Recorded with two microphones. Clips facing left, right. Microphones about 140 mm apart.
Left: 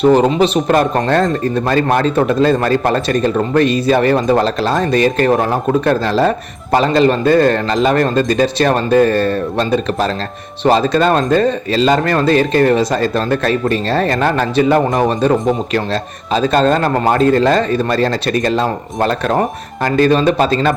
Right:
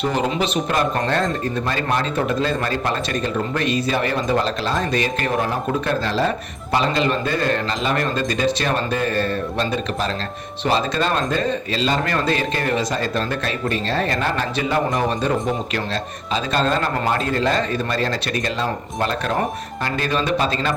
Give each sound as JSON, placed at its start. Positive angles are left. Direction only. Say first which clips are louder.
{"t": 0.1, "sound": "a man's voice", "louder": "left 10 dB", "side_deg": 35}
{"t": 0.7, "sound": "a man's voice", "louder": "left 7 dB", "side_deg": 50}